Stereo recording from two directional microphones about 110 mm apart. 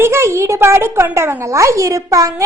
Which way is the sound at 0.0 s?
25° right (ahead or behind).